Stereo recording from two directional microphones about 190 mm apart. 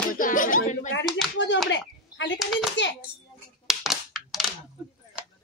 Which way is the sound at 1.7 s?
70° left (ahead or behind).